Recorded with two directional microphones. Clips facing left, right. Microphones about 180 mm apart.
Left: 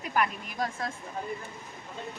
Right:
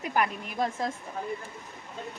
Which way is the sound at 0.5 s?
25° right (ahead or behind).